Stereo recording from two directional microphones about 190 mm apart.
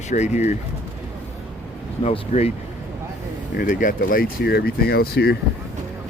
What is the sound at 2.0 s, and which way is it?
Speech, 35° left (ahead or behind).